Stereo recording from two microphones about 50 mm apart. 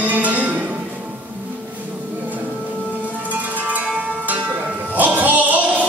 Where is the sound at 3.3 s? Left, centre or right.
Right.